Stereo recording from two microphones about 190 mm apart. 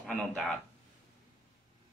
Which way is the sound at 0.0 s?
5° left (ahead or behind).